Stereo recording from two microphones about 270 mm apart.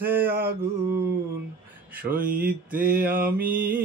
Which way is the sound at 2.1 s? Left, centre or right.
Right.